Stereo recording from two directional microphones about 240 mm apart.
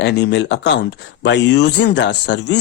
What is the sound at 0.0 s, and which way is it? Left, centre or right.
Speech, left.